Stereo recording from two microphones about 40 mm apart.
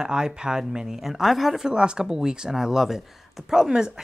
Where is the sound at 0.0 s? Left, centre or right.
Centre.